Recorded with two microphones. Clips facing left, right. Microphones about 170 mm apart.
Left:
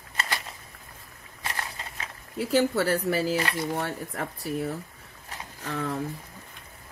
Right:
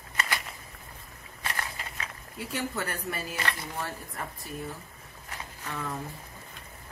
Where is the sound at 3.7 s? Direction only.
75° left (ahead or behind).